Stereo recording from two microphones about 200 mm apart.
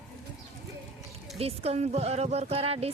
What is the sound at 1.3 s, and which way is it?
Speech, 30° right (ahead or behind).